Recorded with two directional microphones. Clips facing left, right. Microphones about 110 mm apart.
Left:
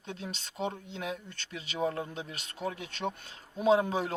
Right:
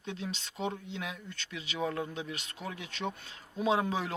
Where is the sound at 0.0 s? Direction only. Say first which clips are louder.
Right 2 dB; 45° left (ahead or behind).